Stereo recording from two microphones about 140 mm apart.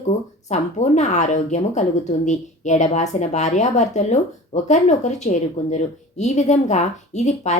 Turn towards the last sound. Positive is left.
turn(degrees=55)  # may be behind; listen again after turning